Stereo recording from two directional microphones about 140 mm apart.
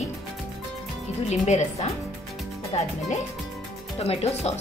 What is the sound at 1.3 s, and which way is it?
A woman's voice, 55° left (ahead or behind).